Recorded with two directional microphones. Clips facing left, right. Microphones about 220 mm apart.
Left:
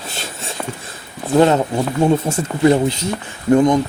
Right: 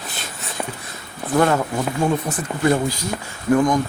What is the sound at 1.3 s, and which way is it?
Speech, 25° left (ahead or behind).